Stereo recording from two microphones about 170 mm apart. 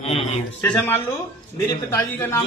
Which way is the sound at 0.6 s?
10° left (ahead or behind).